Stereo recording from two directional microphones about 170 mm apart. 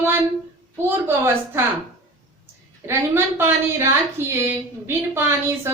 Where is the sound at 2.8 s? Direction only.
15° right (ahead or behind).